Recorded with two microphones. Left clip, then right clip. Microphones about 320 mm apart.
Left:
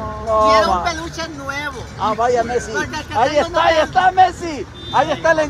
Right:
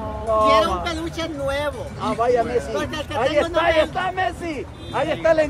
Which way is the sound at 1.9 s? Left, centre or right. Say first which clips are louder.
Left 4 dB; left.